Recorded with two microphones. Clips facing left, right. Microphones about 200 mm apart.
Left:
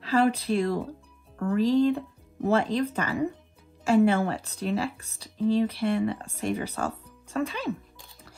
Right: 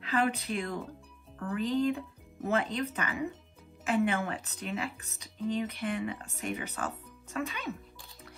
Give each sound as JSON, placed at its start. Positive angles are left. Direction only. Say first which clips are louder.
{"t": 0.0, "sound": "speech", "louder": "left 7 dB", "side_deg": 30}